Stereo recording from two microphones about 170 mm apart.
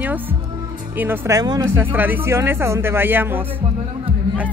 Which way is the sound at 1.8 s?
10° right (ahead or behind).